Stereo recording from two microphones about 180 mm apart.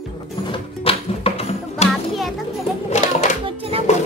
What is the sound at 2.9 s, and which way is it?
Music, 40° left (ahead or behind).